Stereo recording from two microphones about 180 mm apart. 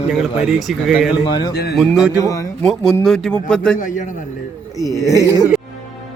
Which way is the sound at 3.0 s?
5° left (ahead or behind).